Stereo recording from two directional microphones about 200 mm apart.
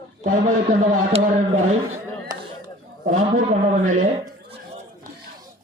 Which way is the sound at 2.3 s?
20° right (ahead or behind).